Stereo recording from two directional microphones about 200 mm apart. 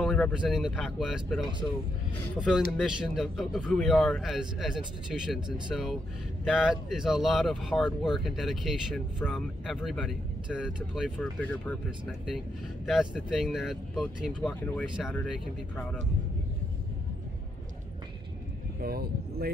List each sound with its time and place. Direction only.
0.0 s speech: centre (ahead or behind)
12.8 s speech: 5° right (ahead or behind)
14.5 s speech: 10° left (ahead or behind)
18.8 s speech: 50° right (ahead or behind)